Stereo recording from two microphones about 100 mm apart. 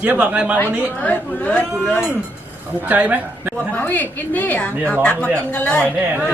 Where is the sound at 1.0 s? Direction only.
15° left (ahead or behind).